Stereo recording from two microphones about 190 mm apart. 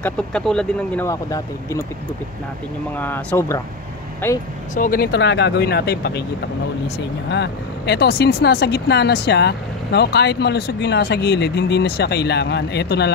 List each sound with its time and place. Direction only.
0.0 s speech: 5° left (ahead or behind)
3.0 s speech: 10° left (ahead or behind)
4.7 s speech: 45° left (ahead or behind)
7.2 s speech: 65° left (ahead or behind)